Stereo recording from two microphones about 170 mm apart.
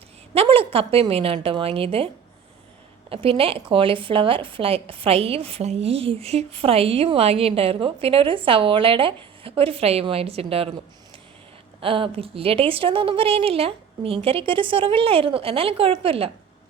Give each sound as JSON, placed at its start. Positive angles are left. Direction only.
{"t": 0.3, "sound": "a woman's voice", "side_deg": -35}
{"t": 3.1, "sound": "a woman's voice", "side_deg": -35}
{"t": 11.8, "sound": "a woman's voice", "side_deg": -30}